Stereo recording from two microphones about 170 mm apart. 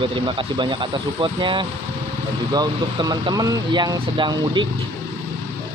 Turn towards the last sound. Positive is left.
turn(degrees=-30)  # may be behind; listen again after turning